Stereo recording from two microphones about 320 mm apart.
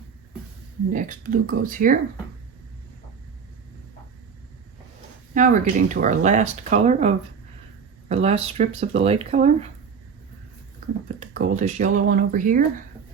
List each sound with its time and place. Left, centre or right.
0.9 s speech: right
5.3 s speech: right
8.1 s speech: centre
11.2 s speech: right